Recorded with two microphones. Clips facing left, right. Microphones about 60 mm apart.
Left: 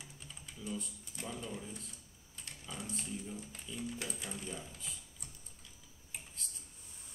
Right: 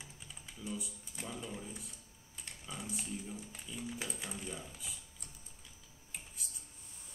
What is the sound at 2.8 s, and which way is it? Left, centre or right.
Speech, centre.